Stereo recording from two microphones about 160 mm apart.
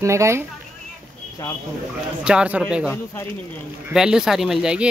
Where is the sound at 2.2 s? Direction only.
5° right (ahead or behind).